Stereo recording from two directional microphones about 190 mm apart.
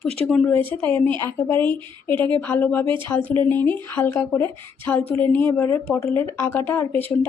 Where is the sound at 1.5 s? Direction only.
10° left (ahead or behind).